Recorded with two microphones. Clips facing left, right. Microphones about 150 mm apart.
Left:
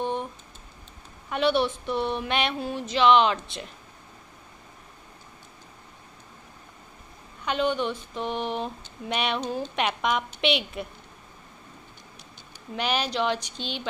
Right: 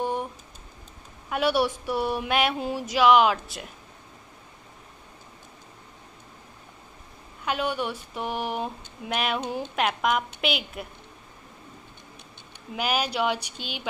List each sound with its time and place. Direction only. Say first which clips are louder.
0.0 s typing: right 1 dB; 10° right (ahead or behind)
1.3 s a woman's voice: even; 10° right (ahead or behind)
7.4 s a woman's voice: left 2 dB; 10° right (ahead or behind)
9.4 s a woman's voice: left 1 dB; 15° right (ahead or behind)
9.8 s a woman's voice: right 2 dB; centre (ahead or behind)
12.7 s a woman's voice: even; 5° right (ahead or behind)